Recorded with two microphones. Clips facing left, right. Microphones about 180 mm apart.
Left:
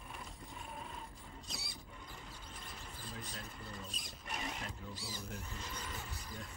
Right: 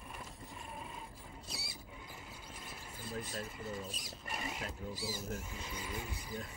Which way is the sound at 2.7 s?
5° right (ahead or behind).